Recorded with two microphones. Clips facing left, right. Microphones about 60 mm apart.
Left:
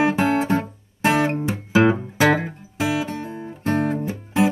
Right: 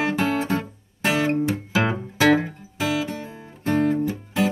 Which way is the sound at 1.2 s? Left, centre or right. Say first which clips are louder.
Right 1 dB; left.